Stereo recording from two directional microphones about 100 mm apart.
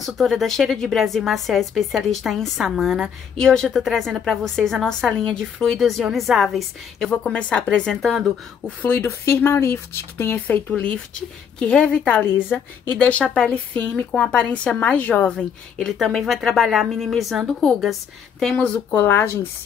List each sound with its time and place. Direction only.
0.0 s a woman's voice: centre (ahead or behind)
8.8 s a woman's voice: 20° left (ahead or behind); by 18.9 s 5° left (ahead or behind)
18.9 s speech: 20° left (ahead or behind)